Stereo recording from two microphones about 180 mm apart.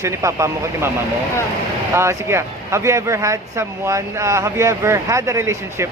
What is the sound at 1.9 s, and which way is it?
Speech, 15° right (ahead or behind).